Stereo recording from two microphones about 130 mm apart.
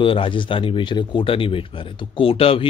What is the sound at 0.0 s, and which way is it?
A man's voice, 40° left (ahead or behind).